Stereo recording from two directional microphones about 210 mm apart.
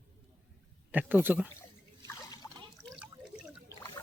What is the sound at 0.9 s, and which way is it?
Speech, 10° right (ahead or behind).